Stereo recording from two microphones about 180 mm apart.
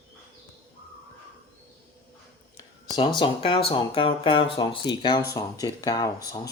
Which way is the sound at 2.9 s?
25° left (ahead or behind).